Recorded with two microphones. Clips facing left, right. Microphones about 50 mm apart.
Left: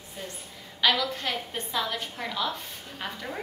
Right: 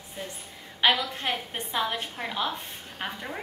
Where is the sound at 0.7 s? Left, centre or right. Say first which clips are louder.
Right 1 dB; right.